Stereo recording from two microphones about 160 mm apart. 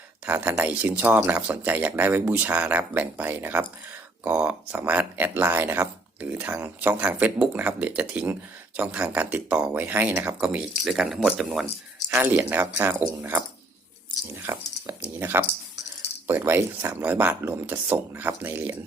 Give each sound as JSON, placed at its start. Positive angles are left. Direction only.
{"t": 0.3, "sound": "speech", "side_deg": -10}
{"t": 14.4, "sound": "speech", "side_deg": -15}